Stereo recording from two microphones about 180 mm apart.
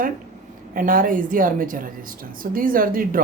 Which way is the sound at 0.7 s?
50° right (ahead or behind).